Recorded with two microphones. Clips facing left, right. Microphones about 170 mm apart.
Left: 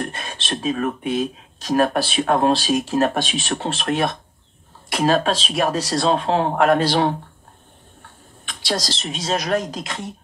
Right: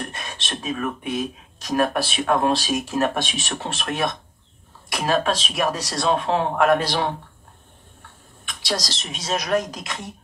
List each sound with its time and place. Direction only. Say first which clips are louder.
0.1 s speech: left 4 dB; 30° left (ahead or behind)
8.5 s speech: left 2 dB; 30° left (ahead or behind)